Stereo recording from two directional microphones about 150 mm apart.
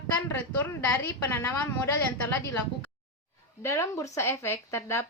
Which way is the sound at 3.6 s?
20° left (ahead or behind).